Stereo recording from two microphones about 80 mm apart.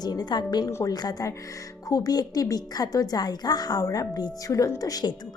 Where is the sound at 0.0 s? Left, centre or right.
Left.